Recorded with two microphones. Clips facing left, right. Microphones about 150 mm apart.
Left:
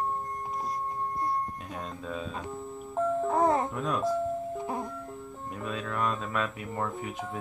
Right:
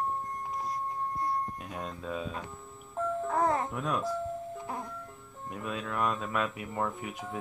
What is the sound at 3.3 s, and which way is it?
Speech, 25° left (ahead or behind).